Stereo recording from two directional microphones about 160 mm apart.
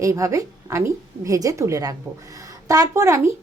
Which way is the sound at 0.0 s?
20° right (ahead or behind).